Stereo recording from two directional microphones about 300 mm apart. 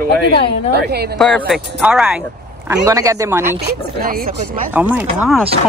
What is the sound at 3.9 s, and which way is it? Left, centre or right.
Speech, right.